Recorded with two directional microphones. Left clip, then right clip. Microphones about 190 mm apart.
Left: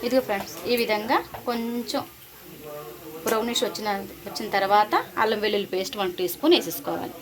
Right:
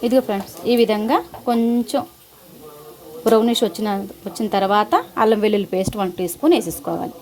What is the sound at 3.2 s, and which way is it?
A woman's voice, 55° right (ahead or behind).